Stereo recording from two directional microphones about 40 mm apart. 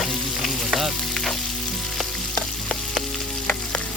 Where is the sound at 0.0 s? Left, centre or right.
Centre.